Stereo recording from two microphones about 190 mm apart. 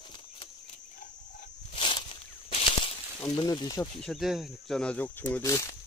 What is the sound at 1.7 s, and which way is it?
Walk, 25° left (ahead or behind).